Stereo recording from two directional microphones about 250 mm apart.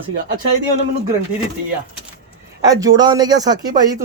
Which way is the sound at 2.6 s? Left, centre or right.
Centre.